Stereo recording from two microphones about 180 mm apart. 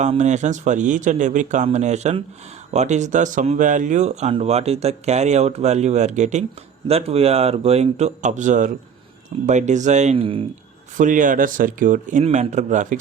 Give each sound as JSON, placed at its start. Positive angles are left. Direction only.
{"t": 0.0, "sound": "speech", "side_deg": -40}
{"t": 10.9, "sound": "speech", "side_deg": -45}